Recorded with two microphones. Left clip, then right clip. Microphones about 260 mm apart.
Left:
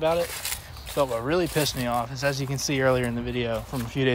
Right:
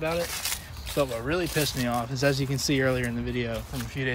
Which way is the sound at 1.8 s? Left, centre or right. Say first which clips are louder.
Left 1 dB; centre.